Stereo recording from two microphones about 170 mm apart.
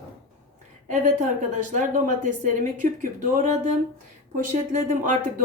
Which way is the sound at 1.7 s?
45° right (ahead or behind).